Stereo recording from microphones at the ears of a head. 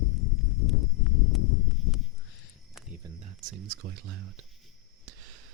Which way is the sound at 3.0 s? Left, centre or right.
Right.